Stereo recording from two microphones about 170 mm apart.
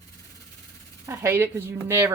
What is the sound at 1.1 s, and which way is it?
Speech, 15° right (ahead or behind).